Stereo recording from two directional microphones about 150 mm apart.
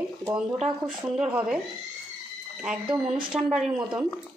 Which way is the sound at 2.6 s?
5° right (ahead or behind).